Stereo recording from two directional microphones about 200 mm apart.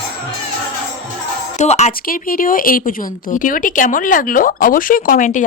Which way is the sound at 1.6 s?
35° left (ahead or behind).